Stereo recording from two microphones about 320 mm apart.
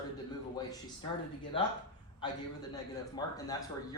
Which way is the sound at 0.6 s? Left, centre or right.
Centre.